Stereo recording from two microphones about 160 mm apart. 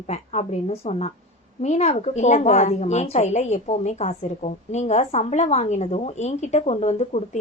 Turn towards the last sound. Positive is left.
turn(degrees=45)  # may be behind; listen again after turning